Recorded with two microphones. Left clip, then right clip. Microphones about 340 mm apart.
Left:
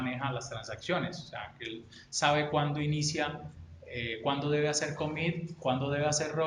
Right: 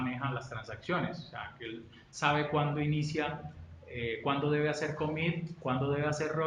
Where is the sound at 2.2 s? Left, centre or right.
Left.